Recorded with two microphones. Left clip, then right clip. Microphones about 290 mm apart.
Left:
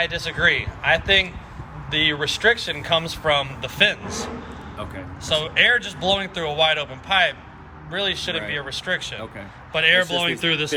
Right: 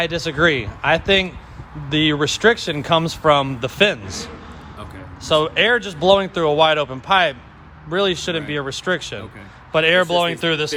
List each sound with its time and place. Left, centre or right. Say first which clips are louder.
0.0 s speech: right 2 dB; right